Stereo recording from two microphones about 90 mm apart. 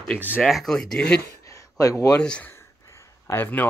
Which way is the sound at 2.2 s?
10° left (ahead or behind).